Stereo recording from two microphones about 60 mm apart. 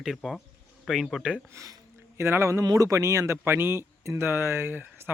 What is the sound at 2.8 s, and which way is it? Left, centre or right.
Speech, right.